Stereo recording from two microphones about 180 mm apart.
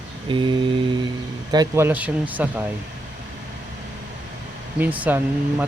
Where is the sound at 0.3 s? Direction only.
25° right (ahead or behind).